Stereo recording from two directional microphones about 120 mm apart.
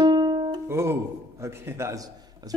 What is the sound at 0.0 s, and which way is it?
Music, 35° right (ahead or behind).